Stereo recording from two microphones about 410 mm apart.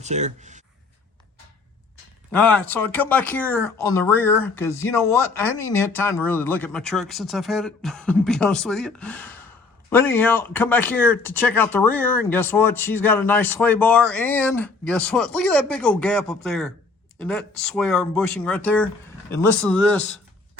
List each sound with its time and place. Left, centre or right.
0.0 s speech: centre
2.3 s speech: centre